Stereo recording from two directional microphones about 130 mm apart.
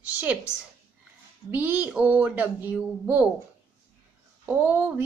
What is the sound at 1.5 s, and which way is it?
Speech, 15° right (ahead or behind).